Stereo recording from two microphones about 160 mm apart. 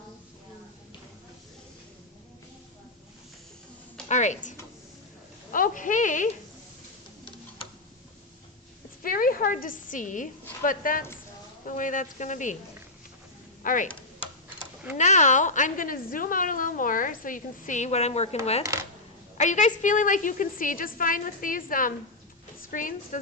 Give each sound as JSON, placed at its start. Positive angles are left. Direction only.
{"t": 4.1, "sound": "speech", "side_deg": 50}
{"t": 9.0, "sound": "a woman's voice", "side_deg": 60}
{"t": 13.6, "sound": "speech", "side_deg": 60}
{"t": 14.9, "sound": "a woman's voice", "side_deg": 50}
{"t": 18.6, "sound": "speech", "side_deg": -20}
{"t": 19.4, "sound": "a woman's voice", "side_deg": 50}